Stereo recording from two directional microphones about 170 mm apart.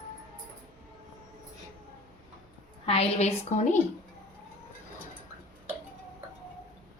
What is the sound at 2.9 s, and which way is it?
Speech, 40° left (ahead or behind).